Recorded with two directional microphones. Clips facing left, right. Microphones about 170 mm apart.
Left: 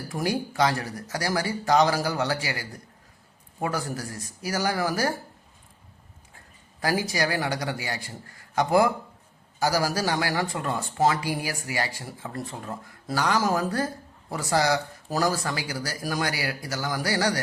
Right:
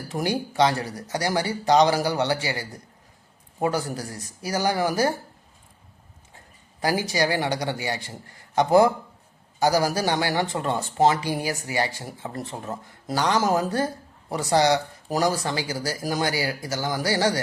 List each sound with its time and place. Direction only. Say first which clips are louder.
0.1 s speech: right 2 dB; 25° right (ahead or behind)
6.3 s speech: right 3 dB; 20° right (ahead or behind)